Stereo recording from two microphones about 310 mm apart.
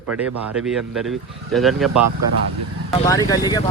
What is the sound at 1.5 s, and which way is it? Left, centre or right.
Speech, centre.